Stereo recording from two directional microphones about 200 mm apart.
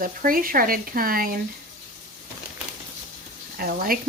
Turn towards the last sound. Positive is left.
turn(degrees=-45)  # may be behind; listen again after turning